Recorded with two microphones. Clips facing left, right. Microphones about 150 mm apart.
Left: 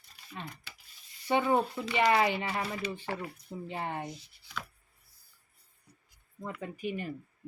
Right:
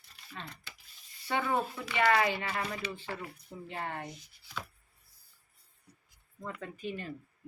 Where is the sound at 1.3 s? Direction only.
20° left (ahead or behind).